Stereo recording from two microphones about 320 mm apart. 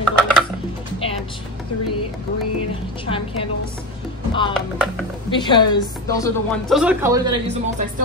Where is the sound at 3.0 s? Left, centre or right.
Centre.